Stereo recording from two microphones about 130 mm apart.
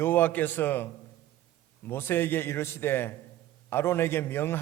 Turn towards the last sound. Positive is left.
turn(degrees=15)  # may be behind; listen again after turning